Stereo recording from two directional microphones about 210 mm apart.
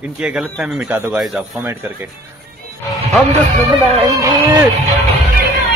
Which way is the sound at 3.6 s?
20° right (ahead or behind).